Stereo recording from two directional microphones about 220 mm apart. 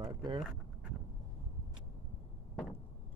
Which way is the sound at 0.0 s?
20° right (ahead or behind).